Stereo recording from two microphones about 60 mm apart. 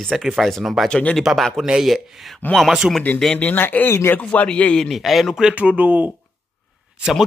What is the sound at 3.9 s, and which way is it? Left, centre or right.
Speech, left.